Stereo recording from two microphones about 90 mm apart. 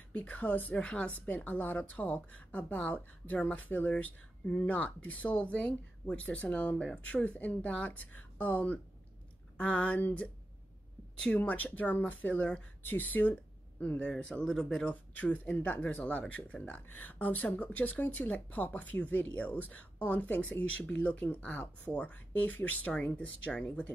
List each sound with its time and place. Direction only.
0.1 s speech: 15° left (ahead or behind)
15.1 s speech: 15° left (ahead or behind)